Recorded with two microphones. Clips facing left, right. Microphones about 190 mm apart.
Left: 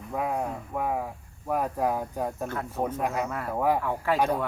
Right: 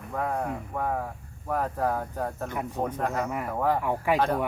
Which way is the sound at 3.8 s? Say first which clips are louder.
Right 2 dB; 15° right (ahead or behind).